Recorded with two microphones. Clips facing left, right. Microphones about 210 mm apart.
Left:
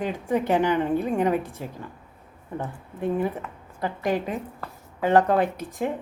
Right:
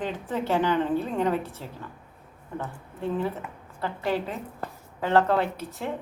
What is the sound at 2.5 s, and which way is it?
A woman's voice, 15° left (ahead or behind).